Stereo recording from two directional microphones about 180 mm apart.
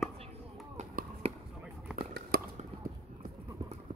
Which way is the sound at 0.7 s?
40° right (ahead or behind).